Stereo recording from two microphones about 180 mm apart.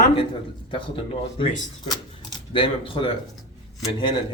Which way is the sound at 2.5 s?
30° left (ahead or behind).